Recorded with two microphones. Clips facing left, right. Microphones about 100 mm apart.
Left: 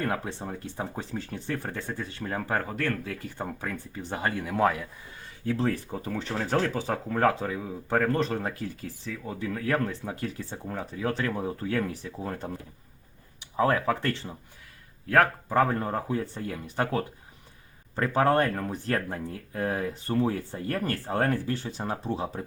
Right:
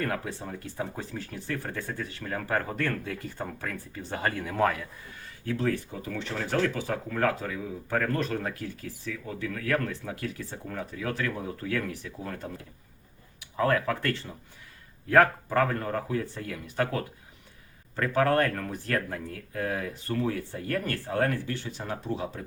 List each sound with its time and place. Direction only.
0.0 s speech: 25° left (ahead or behind)
2.6 s speech: centre (ahead or behind)
3.2 s speech: 10° left (ahead or behind)
5.5 s speech: 25° left (ahead or behind)
13.6 s speech: 20° left (ahead or behind)
15.4 s speech: 20° left (ahead or behind)